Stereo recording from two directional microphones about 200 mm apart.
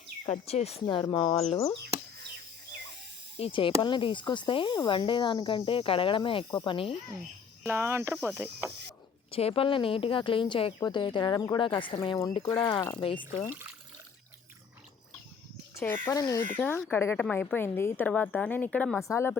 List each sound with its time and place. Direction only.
0.3 s speech: 30° left (ahead or behind)
3.3 s speech: 25° left (ahead or behind)
7.6 s speech: 10° right (ahead or behind)
9.3 s speech: 30° left (ahead or behind)
16.0 s a woman's voice: 15° left (ahead or behind)